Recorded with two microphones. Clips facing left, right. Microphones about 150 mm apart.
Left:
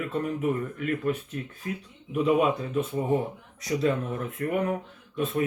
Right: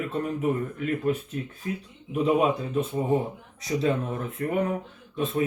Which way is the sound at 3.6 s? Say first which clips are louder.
Even; 25° right (ahead or behind).